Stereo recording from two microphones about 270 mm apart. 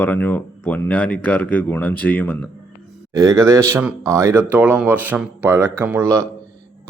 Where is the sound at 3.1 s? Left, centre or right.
Centre.